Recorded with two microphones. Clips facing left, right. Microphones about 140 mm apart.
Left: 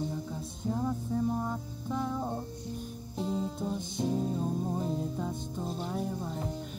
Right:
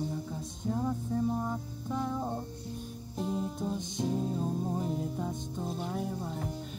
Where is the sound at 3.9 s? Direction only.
Centre (ahead or behind).